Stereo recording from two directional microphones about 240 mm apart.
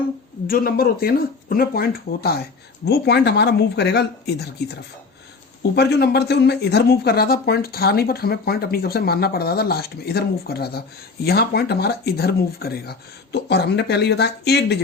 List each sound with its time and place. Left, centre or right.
0.4 s speech: left